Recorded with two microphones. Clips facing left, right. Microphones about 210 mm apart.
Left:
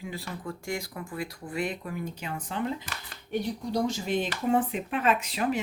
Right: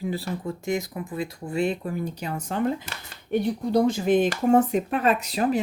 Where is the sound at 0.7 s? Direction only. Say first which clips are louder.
Right 8 dB; 20° right (ahead or behind).